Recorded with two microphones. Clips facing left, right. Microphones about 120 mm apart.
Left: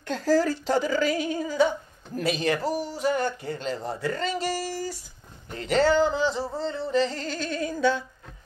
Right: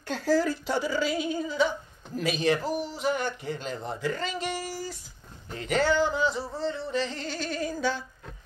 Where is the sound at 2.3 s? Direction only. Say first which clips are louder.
Even; 35° left (ahead or behind).